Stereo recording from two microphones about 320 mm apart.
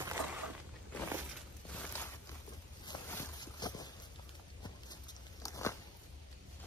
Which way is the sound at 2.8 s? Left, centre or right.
Centre.